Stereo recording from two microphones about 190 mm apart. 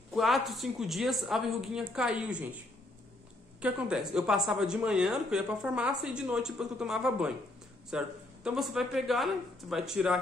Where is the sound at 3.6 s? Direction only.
5° right (ahead or behind).